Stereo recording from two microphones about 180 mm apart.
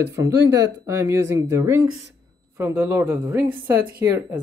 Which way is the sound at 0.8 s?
15° right (ahead or behind).